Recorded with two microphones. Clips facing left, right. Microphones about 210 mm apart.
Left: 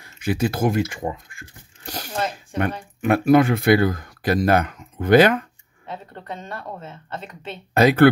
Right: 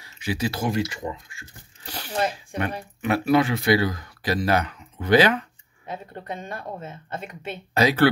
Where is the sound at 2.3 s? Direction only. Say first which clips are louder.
Left 4 dB; 50° left (ahead or behind).